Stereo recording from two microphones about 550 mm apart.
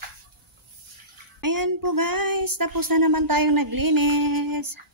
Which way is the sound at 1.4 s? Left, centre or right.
Right.